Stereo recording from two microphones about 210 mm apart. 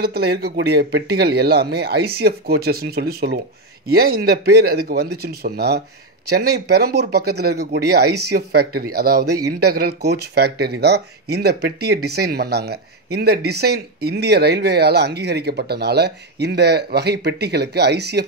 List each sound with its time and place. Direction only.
0.0 s speech: 50° right (ahead or behind)